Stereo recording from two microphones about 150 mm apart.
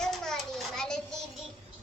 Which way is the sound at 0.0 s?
5° left (ahead or behind).